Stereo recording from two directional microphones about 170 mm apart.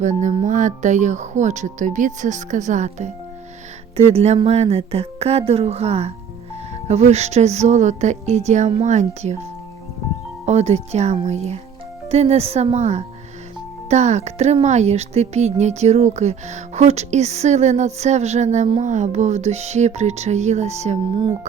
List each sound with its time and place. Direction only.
0.0 s speech: 45° right (ahead or behind)
10.4 s speech: 40° right (ahead or behind)